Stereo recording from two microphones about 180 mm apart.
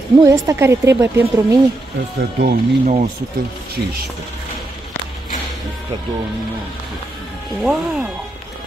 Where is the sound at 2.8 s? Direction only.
40° right (ahead or behind).